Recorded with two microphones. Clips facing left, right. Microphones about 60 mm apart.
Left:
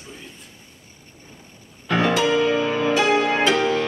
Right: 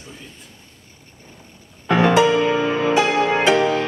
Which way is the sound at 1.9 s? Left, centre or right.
Right.